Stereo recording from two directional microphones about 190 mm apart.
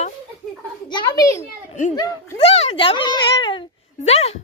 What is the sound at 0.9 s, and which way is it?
A child's voice, 20° left (ahead or behind).